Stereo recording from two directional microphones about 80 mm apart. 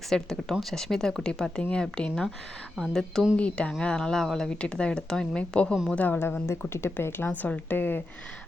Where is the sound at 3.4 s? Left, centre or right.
Centre.